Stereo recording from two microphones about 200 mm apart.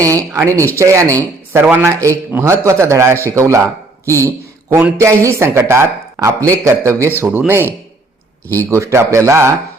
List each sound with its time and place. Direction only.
0.0 s a man's voice: 15° right (ahead or behind)